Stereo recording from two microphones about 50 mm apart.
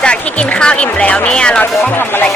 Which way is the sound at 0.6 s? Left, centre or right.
Left.